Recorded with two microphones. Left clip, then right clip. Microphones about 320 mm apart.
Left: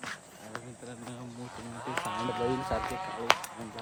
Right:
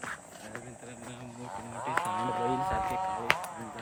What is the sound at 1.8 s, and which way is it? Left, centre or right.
Speech, centre.